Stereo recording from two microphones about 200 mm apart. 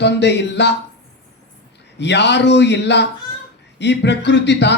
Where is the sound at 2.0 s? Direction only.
60° left (ahead or behind).